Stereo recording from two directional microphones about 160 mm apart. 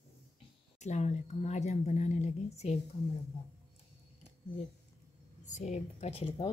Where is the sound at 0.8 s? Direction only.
45° left (ahead or behind).